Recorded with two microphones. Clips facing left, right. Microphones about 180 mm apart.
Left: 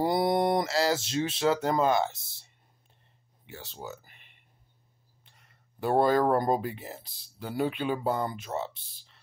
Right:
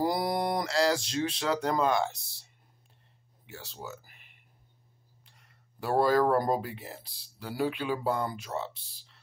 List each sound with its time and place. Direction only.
0.0 s speech: centre (ahead or behind)
3.4 s speech: centre (ahead or behind)
5.8 s speech: centre (ahead or behind)